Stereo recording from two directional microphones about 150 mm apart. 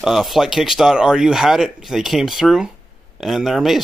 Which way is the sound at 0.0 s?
Centre (ahead or behind).